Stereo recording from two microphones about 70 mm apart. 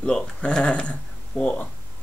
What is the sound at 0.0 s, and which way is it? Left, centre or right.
Speech, centre.